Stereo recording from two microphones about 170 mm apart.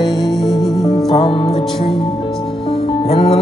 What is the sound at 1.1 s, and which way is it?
Music, 35° left (ahead or behind).